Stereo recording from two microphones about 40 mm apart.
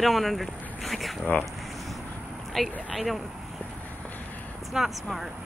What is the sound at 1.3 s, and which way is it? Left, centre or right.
Speech, left.